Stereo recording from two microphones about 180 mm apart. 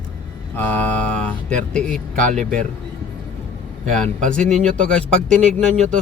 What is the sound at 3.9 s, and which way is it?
Speech, 5° left (ahead or behind).